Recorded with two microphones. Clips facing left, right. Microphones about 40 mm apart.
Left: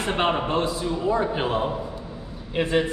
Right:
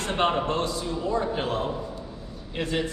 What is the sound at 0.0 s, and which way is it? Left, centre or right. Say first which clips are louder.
A man's voice: left 1 dB; centre.